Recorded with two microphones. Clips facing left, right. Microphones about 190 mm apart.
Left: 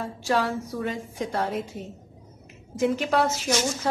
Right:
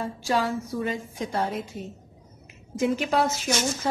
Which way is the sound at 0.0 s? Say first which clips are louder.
Even; centre (ahead or behind).